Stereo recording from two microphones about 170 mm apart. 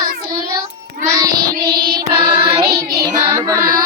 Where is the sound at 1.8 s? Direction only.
60° right (ahead or behind).